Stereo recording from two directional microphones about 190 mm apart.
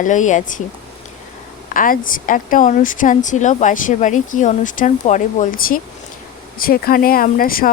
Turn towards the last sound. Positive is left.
turn(degrees=50)  # may be behind; listen again after turning